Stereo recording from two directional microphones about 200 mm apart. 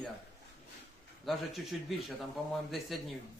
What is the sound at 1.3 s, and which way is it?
Speech, centre (ahead or behind).